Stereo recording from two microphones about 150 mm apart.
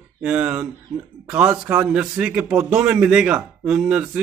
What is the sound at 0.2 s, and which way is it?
Speech, 5° right (ahead or behind).